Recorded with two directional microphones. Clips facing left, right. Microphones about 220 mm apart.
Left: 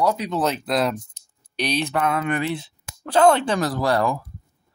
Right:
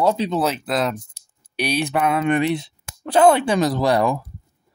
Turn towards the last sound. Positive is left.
turn(degrees=-20)  # may be behind; listen again after turning